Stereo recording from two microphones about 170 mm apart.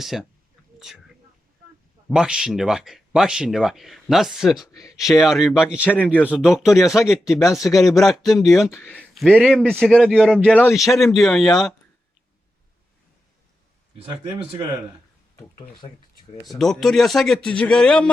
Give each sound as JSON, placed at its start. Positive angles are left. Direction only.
{"t": 0.0, "sound": "speech", "side_deg": 0}
{"t": 2.0, "sound": "speech", "side_deg": -5}
{"t": 13.9, "sound": "speech", "side_deg": -35}
{"t": 15.4, "sound": "speech", "side_deg": 20}
{"t": 16.6, "sound": "speech", "side_deg": 0}